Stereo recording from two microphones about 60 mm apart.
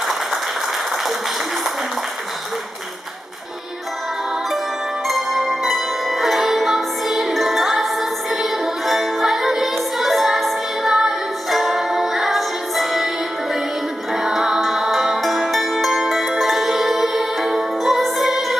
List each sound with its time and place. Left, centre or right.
5.0 s music: centre
14.1 s music: centre